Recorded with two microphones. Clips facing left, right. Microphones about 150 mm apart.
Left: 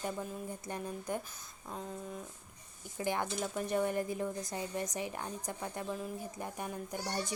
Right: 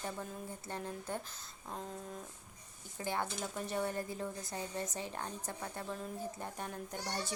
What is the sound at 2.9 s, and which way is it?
Speech, 15° left (ahead or behind).